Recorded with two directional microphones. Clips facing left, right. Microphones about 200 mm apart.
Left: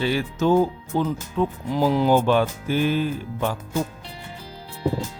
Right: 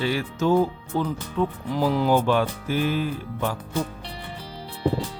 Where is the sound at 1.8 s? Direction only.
25° left (ahead or behind).